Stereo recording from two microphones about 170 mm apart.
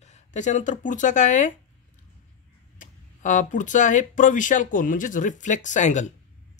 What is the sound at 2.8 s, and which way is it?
Speech, 45° left (ahead or behind).